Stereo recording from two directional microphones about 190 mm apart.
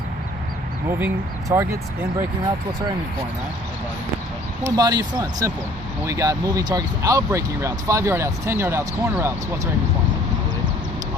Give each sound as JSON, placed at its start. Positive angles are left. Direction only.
{"t": 0.9, "sound": "speech", "side_deg": -10}
{"t": 4.6, "sound": "speech", "side_deg": -20}